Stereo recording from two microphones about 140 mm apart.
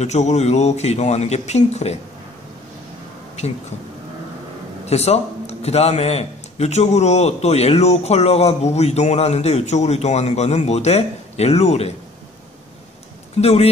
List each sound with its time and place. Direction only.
0.0 s a man's voice: 55° left (ahead or behind)
4.8 s a man's voice: 50° left (ahead or behind)
13.4 s a man's voice: 50° left (ahead or behind)